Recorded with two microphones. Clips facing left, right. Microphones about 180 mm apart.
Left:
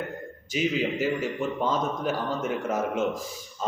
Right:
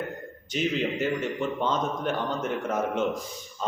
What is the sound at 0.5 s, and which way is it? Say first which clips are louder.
A man's voice: left 1 dB; 5° left (ahead or behind).